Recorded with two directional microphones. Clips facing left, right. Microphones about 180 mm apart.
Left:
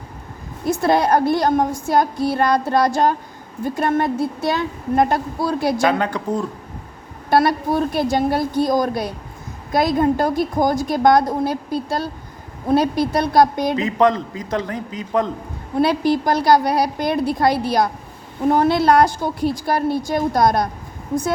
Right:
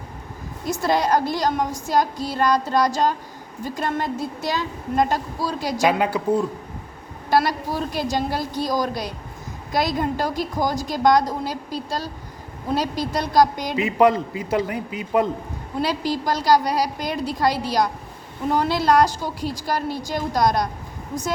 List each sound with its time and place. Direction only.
0.7 s a woman's voice: 55° left (ahead or behind)
5.9 s a man's voice: 10° right (ahead or behind)
7.3 s a woman's voice: 55° left (ahead or behind)
13.8 s a man's voice: 10° right (ahead or behind)
15.8 s a woman's voice: 60° left (ahead or behind)